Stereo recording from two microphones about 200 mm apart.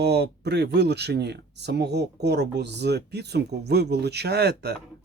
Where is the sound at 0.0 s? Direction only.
55° right (ahead or behind).